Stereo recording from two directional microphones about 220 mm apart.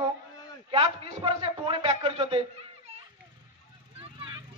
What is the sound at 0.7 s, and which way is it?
Speech, 25° right (ahead or behind).